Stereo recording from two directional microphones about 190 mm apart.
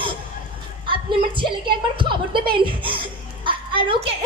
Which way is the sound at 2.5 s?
25° right (ahead or behind).